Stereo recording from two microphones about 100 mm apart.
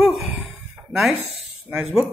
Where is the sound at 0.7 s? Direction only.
10° right (ahead or behind).